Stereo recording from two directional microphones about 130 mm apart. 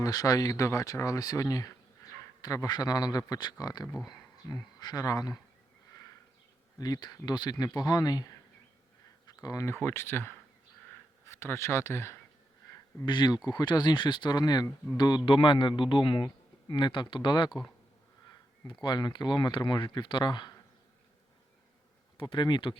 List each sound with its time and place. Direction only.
0.0 s speech: 30° left (ahead or behind)
3.9 s speech: centre (ahead or behind)
4.8 s a man's voice: 30° left (ahead or behind)
6.7 s speech: 30° left (ahead or behind)
13.1 s a man's voice: 35° left (ahead or behind)
18.7 s a man's voice: 35° left (ahead or behind)
22.2 s a man's voice: 40° left (ahead or behind)